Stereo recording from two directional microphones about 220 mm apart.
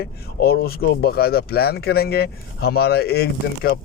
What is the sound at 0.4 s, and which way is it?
Speech, 45° left (ahead or behind).